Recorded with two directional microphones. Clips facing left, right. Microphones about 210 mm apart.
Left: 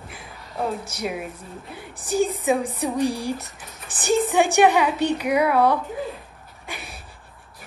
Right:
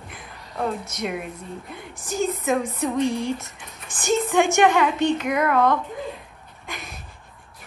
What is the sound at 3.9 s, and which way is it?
Speech, 35° left (ahead or behind).